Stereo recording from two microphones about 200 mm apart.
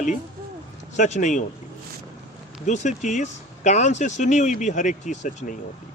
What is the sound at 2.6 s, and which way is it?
Speech, 35° left (ahead or behind).